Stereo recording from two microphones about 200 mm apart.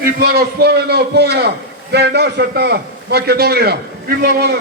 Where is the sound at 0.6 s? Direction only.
55° right (ahead or behind).